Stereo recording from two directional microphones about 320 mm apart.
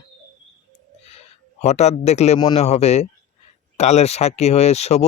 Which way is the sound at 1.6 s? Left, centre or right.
Left.